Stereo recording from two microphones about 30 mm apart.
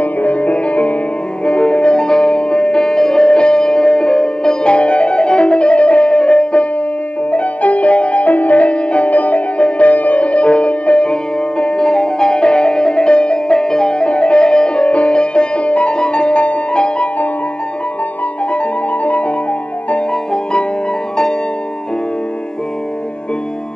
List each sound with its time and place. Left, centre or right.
0.0 s music: left
7.2 s music: left
9.6 s music: left
9.8 s music: left
14.0 s music: left
19.0 s music: left